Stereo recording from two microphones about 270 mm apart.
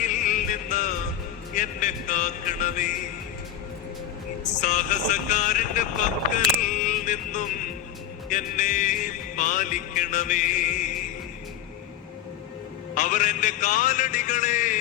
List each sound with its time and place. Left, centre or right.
0.0 s music: left
1.5 s speech: left
4.6 s speech: left
12.9 s speech: left